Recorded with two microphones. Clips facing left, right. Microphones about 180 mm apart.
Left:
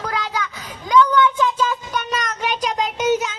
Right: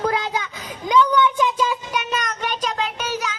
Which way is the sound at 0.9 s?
15° right (ahead or behind).